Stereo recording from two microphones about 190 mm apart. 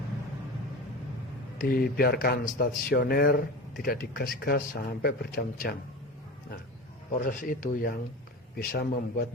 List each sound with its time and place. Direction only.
1.5 s speech: 50° left (ahead or behind)
7.1 s speech: 45° left (ahead or behind)